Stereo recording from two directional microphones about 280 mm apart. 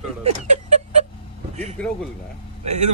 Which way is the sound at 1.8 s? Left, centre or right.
Centre.